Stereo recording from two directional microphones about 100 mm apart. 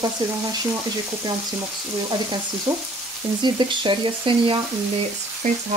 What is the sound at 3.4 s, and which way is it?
Speech, 50° right (ahead or behind).